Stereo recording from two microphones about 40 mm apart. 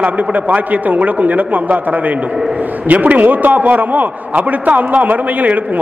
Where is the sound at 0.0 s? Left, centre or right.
Right.